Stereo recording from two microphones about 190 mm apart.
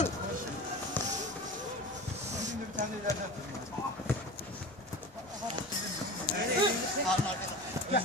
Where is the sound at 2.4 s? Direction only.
40° right (ahead or behind).